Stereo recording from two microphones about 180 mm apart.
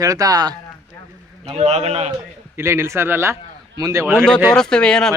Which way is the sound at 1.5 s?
35° right (ahead or behind).